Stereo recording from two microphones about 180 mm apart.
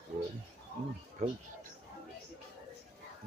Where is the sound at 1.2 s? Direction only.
40° right (ahead or behind).